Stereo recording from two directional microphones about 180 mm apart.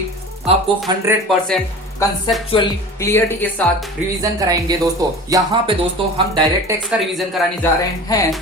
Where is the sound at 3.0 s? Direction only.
15° left (ahead or behind).